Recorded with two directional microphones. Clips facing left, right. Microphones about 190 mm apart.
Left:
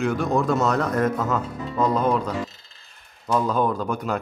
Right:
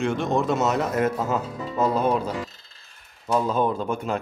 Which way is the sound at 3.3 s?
25° right (ahead or behind).